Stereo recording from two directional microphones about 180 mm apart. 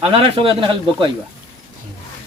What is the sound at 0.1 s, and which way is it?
Speech, 30° right (ahead or behind).